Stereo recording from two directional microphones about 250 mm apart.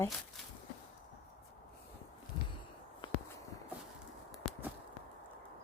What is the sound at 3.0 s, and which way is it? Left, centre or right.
Walk, centre.